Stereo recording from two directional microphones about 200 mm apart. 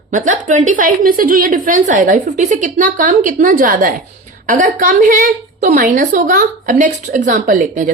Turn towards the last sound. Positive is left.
turn(degrees=-40)  # may be behind; listen again after turning